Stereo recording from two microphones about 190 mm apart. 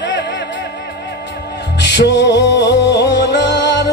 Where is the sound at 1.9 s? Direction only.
65° left (ahead or behind).